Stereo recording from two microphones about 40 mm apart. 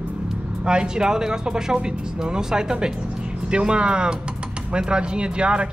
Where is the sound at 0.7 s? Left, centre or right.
Right.